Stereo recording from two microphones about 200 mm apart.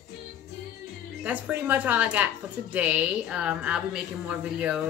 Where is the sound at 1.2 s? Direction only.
10° right (ahead or behind).